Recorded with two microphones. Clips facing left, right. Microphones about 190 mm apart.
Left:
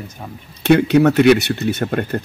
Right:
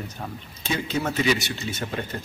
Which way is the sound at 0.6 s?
65° left (ahead or behind).